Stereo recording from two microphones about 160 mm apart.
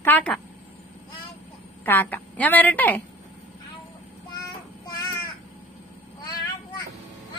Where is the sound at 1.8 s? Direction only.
10° left (ahead or behind).